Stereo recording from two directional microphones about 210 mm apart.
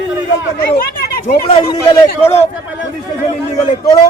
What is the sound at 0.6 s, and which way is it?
Speech, 45° left (ahead or behind).